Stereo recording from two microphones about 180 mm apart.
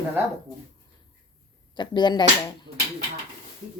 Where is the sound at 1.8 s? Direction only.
25° left (ahead or behind).